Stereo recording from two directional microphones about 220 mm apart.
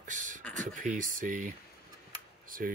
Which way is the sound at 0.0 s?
35° right (ahead or behind).